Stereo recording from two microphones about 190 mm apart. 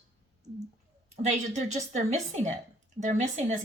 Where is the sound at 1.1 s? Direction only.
35° right (ahead or behind).